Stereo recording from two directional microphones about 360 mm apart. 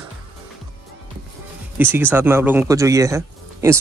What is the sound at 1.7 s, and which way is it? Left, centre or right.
Speech, centre.